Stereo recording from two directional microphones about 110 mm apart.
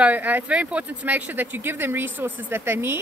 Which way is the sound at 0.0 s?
15° right (ahead or behind).